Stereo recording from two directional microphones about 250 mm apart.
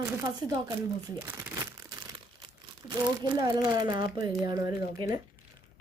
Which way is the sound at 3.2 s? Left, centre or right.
Centre.